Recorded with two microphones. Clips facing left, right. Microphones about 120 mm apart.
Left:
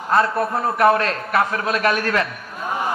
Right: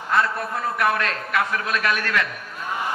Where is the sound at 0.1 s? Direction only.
35° left (ahead or behind).